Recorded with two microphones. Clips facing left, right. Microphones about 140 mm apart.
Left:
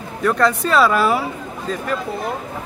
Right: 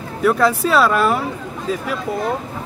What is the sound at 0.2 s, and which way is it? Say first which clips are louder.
Speech: right 2 dB; 5° right (ahead or behind).